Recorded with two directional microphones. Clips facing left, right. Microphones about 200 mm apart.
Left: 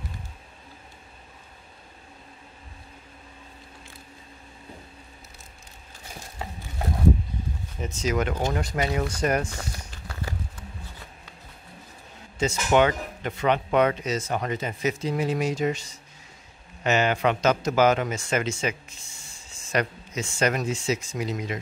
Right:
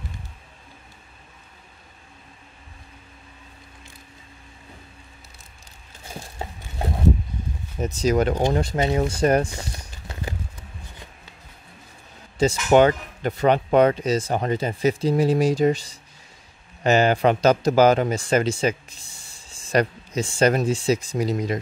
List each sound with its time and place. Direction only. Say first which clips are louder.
7.8 s speech: right 6 dB; 35° right (ahead or behind)
9.5 s a sound: right 1 dB; 15° right (ahead or behind)
12.4 s speech: right 5 dB; 35° right (ahead or behind)